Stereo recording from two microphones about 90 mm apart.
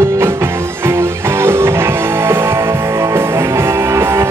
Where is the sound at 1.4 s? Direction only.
30° right (ahead or behind).